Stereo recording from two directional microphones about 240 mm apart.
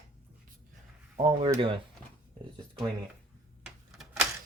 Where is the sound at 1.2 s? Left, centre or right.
Right.